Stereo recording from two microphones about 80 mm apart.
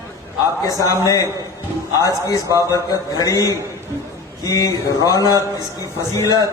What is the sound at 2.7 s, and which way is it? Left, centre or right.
A man's voice, left.